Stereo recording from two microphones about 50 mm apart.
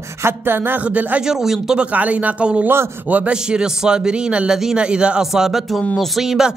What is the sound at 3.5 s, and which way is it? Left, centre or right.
Speech, centre.